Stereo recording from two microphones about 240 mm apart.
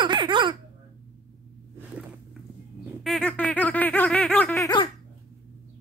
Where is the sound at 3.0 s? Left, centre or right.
Centre.